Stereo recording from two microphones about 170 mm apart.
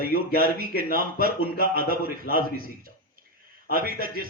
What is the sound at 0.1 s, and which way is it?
Speech, 65° left (ahead or behind).